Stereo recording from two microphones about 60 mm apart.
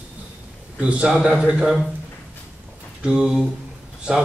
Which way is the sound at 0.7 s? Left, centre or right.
Centre.